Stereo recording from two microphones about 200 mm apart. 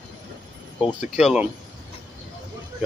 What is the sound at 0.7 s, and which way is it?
Speech, 5° right (ahead or behind).